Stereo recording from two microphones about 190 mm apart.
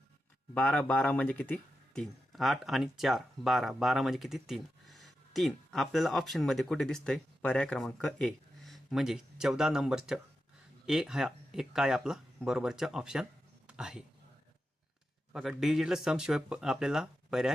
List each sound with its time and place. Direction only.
0.5 s speech: 5° left (ahead or behind)
13.7 s a sound: 5° right (ahead or behind)
15.3 s speech: centre (ahead or behind)